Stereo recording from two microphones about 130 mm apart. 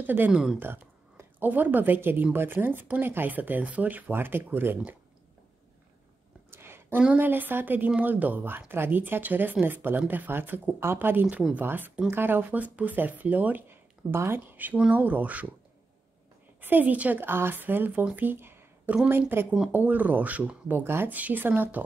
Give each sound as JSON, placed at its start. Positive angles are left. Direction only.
{"t": 0.0, "sound": "a woman's voice", "side_deg": -15}
{"t": 6.5, "sound": "a woman's voice", "side_deg": -20}
{"t": 16.6, "sound": "a woman's voice", "side_deg": -15}